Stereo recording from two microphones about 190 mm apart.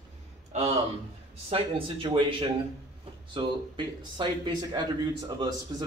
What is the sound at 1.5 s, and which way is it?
A man's voice, 30° right (ahead or behind).